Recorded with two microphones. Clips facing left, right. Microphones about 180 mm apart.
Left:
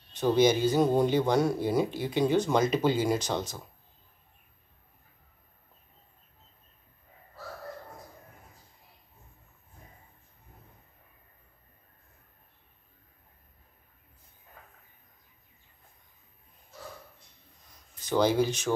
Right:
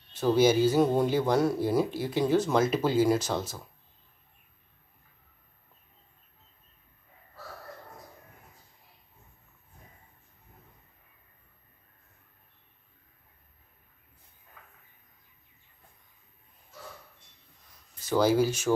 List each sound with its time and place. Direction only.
0.1 s speech: 5° right (ahead or behind)
14.6 s a sound: 40° left (ahead or behind)
18.0 s speech: 5° right (ahead or behind)